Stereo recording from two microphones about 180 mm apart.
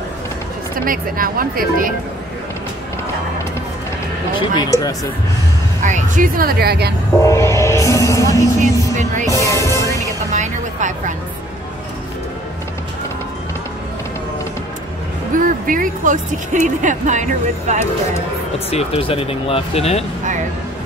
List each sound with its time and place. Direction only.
0.8 s speech: 50° right (ahead or behind)
4.4 s speech: 20° left (ahead or behind)
5.8 s speech: 45° right (ahead or behind); by 6.9 s 60° right (ahead or behind)
7.2 s music: 15° left (ahead or behind)
8.9 s speech: 40° right (ahead or behind)
9.3 s music: 15° left (ahead or behind)
10.3 s vehicle: 40° right (ahead or behind)
15.3 s speech: 50° right (ahead or behind)
18.7 s speech: 35° left (ahead or behind)